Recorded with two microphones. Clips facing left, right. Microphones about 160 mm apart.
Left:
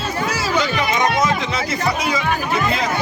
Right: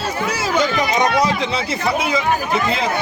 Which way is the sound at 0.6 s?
40° right (ahead or behind).